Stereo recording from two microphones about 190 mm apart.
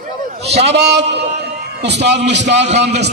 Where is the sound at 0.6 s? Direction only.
60° right (ahead or behind).